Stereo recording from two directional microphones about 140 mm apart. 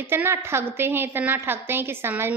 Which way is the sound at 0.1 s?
15° right (ahead or behind).